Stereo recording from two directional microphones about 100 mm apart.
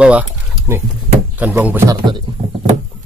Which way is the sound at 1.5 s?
20° right (ahead or behind).